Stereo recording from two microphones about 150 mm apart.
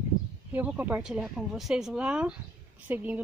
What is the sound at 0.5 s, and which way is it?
Speech, 10° right (ahead or behind).